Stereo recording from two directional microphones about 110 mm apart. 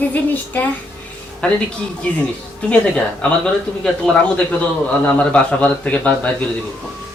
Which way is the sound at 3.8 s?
10° left (ahead or behind).